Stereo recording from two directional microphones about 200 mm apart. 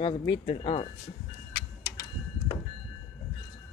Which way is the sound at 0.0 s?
25° left (ahead or behind).